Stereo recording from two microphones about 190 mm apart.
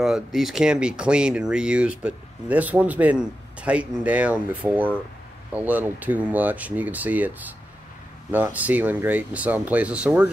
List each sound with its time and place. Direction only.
0.0 s speech: centre (ahead or behind)